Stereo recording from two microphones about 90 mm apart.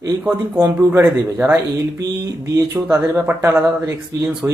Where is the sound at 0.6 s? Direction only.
30° right (ahead or behind).